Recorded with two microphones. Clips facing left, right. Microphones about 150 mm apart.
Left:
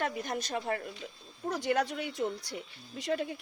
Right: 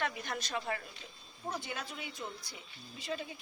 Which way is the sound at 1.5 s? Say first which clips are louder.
Left 10 dB; 75° left (ahead or behind).